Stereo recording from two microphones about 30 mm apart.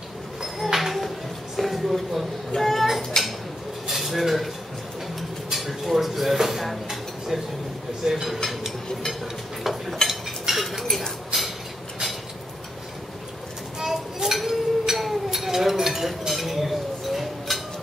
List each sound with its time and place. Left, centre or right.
0.6 s a sound: centre
3.1 s dishes: left
3.8 s dishes: centre
5.5 s dishes: centre
8.0 s speech: centre
9.6 s dishes: centre
10.0 s cutlery: centre
10.5 s cutlery: centre
13.7 s a sound: centre